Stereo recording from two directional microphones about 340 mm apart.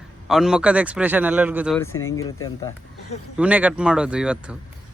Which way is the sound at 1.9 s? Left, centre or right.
Left.